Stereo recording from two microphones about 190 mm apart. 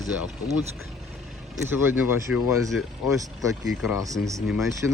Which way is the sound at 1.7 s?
10° right (ahead or behind).